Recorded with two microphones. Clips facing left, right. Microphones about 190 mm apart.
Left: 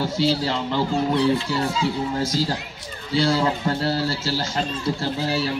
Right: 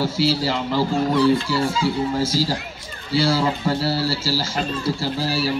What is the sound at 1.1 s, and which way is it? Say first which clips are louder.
Speech: right 4 dB; 20° left (ahead or behind).